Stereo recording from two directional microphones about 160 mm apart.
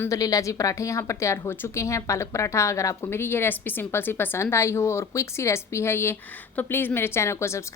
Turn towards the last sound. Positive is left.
turn(degrees=15)  # may be behind; listen again after turning